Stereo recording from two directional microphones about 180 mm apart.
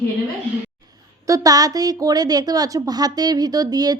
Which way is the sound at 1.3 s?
20° right (ahead or behind).